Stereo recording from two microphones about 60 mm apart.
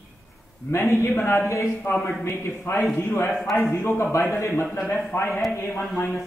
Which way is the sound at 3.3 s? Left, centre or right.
Centre.